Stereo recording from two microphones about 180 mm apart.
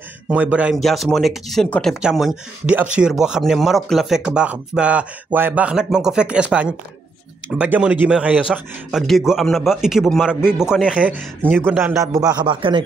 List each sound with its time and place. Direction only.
0.3 s speech: 5° right (ahead or behind); by 12.8 s 25° right (ahead or behind)